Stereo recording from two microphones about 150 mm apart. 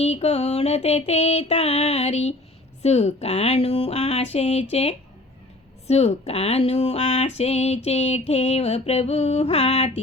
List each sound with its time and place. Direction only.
0.0 s speech: 45° left (ahead or behind)